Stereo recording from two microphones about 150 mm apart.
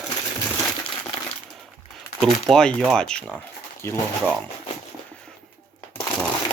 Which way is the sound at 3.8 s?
15° left (ahead or behind).